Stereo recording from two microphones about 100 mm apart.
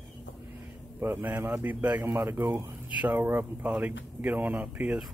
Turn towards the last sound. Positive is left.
turn(degrees=-15)  # may be behind; listen again after turning